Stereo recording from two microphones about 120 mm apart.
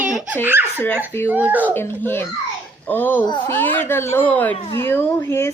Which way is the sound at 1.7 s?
20° left (ahead or behind).